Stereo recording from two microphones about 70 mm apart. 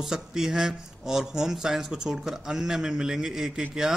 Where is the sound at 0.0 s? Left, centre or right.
Centre.